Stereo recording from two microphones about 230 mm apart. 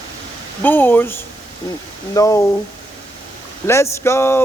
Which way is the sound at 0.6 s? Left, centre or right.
Centre.